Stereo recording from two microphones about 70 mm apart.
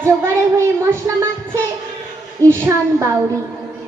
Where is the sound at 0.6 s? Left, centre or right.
Right.